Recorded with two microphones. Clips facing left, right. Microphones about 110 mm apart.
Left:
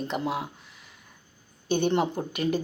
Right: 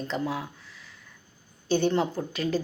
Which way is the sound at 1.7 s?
20° left (ahead or behind).